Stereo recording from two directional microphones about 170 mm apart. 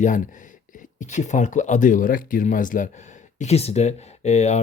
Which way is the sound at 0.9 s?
45° left (ahead or behind).